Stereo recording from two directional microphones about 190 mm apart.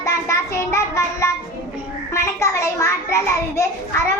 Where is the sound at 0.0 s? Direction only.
15° left (ahead or behind).